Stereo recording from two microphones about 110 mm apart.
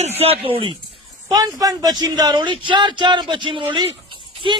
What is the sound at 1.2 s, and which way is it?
A man's voice, 35° right (ahead or behind).